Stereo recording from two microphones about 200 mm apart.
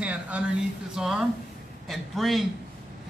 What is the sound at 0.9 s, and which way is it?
Speech, 5° right (ahead or behind).